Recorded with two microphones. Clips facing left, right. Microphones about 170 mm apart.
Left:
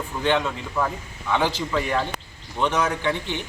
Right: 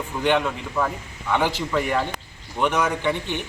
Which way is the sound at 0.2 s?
15° right (ahead or behind).